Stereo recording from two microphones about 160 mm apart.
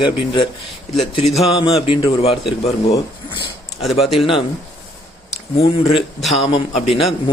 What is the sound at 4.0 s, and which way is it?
Speech, centre (ahead or behind).